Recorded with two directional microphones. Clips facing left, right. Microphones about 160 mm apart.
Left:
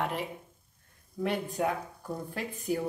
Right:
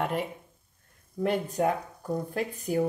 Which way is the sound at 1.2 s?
45° right (ahead or behind).